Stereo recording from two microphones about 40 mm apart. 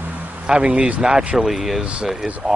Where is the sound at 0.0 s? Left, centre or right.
Right.